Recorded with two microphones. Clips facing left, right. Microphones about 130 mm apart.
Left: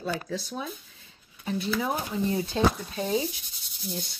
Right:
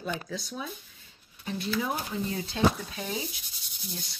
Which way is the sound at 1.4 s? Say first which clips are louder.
Left 2 dB; 30° left (ahead or behind).